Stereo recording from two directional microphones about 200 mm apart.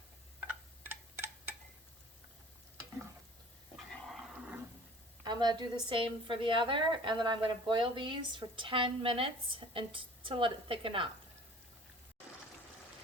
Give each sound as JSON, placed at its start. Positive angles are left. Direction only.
{"t": 4.1, "sound": "dog", "side_deg": -5}
{"t": 5.2, "sound": "a woman's voice", "side_deg": -20}